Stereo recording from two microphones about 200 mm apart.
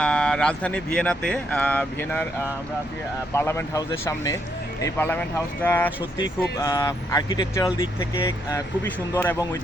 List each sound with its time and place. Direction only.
0.0 s speech: 5° left (ahead or behind)
3.3 s speech: 15° left (ahead or behind)